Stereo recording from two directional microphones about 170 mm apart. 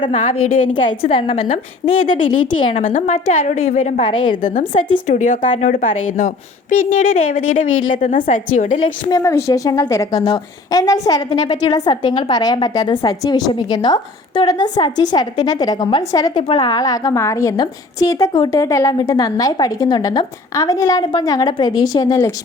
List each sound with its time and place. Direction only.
0.1 s a woman's voice: 45° left (ahead or behind)
0.7 s a woman's voice: 30° left (ahead or behind)
4.4 s a woman's voice: 50° left (ahead or behind)
9.0 s a woman's voice: 20° left (ahead or behind)